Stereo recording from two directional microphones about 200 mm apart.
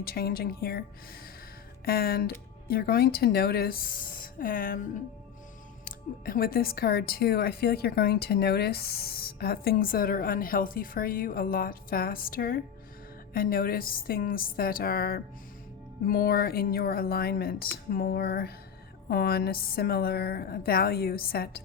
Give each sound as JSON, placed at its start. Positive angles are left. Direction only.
{"t": 0.0, "sound": "speech", "side_deg": 50}
{"t": 5.8, "sound": "speech", "side_deg": 45}